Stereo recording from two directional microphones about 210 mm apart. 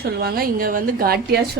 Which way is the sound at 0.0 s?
50° right (ahead or behind).